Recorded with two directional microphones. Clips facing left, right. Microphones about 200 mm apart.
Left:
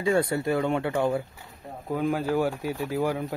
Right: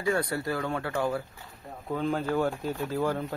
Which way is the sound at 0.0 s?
25° left (ahead or behind).